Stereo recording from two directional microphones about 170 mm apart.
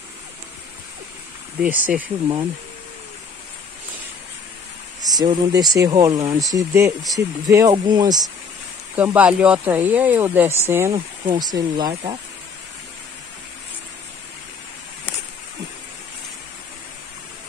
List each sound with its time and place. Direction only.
1.6 s speech: 10° right (ahead or behind)
5.0 s speech: 25° right (ahead or behind)
8.9 s speech: 10° right (ahead or behind)
11.9 s speech: 35° right (ahead or behind)